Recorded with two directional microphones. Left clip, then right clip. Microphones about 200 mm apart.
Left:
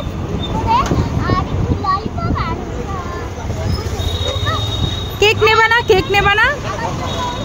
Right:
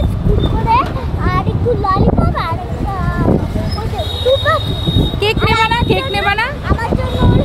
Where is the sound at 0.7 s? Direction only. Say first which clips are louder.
Right 1 dB; 15° right (ahead or behind).